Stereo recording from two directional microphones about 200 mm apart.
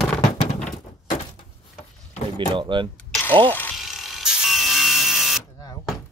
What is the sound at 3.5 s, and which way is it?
Electric toothbrush, 10° left (ahead or behind).